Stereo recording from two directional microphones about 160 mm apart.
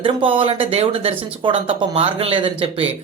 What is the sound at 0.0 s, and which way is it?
Speech, 35° right (ahead or behind).